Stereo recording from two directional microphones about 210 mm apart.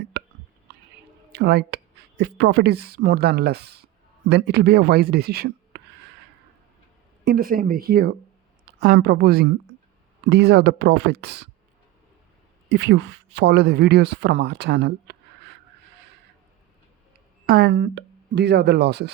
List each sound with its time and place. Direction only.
0.1 s hiccup: 50° right (ahead or behind)
1.3 s speech: 50° right (ahead or behind)
7.3 s a woman's voice: 45° right (ahead or behind)
12.6 s speech: 55° right (ahead or behind)
17.4 s speech: 50° right (ahead or behind)